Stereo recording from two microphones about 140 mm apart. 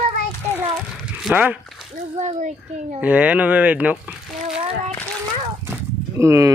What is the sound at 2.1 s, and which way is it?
Speech, 55° right (ahead or behind).